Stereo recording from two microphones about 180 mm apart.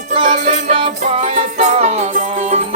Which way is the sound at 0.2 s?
45° right (ahead or behind).